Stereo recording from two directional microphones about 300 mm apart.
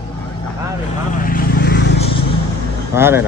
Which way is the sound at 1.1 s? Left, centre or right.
Left.